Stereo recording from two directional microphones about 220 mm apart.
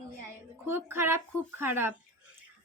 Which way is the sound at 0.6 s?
10° right (ahead or behind).